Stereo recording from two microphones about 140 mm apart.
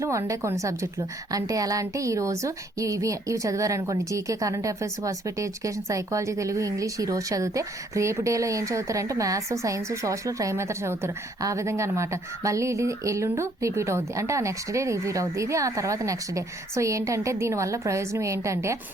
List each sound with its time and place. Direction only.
0.0 s a woman's voice: 20° right (ahead or behind)